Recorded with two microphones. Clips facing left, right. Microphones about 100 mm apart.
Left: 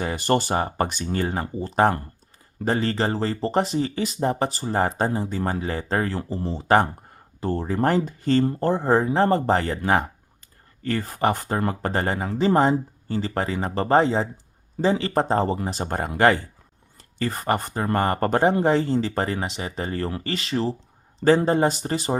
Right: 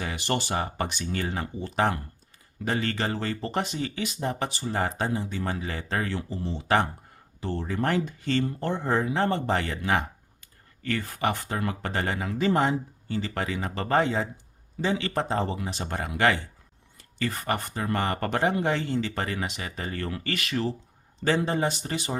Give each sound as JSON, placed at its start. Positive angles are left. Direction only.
{"t": 0.0, "sound": "speech", "side_deg": 40}